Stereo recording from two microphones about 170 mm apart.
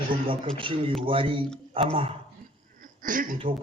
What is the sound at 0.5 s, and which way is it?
Speech, 30° right (ahead or behind).